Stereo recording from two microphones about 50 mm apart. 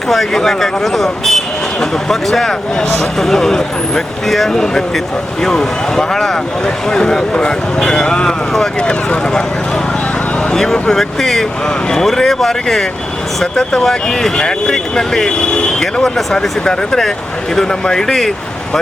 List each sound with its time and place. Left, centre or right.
0.1 s speech: centre
8.9 s speech: left
10.5 s speech: centre